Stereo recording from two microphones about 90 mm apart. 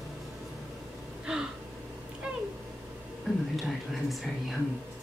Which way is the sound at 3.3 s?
Centre (ahead or behind).